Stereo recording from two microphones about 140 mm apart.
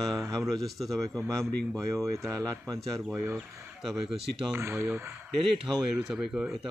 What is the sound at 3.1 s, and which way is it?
Speech, 15° right (ahead or behind).